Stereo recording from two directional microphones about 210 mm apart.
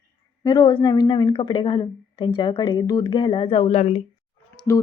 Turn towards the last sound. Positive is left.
turn(degrees=15)  # may be behind; listen again after turning